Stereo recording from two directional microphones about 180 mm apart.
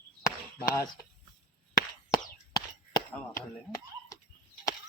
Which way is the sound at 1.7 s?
20° left (ahead or behind).